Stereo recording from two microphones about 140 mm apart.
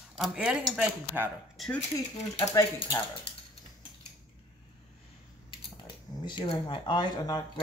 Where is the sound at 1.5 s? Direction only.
Centre (ahead or behind).